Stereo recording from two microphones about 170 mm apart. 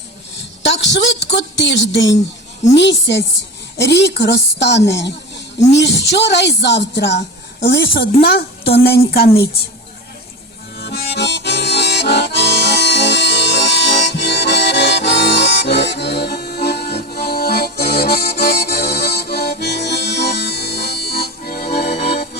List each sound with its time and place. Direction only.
0.6 s a woman's voice: 90° left; by 9.2 s 65° left (ahead or behind)
10.8 s music: 70° left (ahead or behind)